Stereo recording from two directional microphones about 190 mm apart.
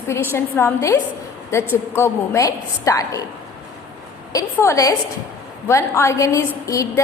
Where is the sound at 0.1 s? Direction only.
15° left (ahead or behind).